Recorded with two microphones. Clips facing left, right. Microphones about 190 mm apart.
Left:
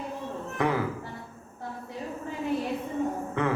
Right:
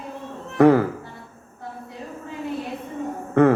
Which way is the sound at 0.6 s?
55° right (ahead or behind).